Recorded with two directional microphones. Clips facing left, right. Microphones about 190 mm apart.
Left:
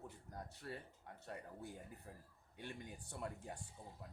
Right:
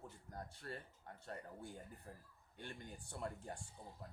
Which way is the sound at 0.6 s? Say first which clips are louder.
Left 1 dB; 10° left (ahead or behind).